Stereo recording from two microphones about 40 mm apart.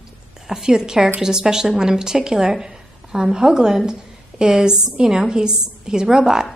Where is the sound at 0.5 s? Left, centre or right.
Centre.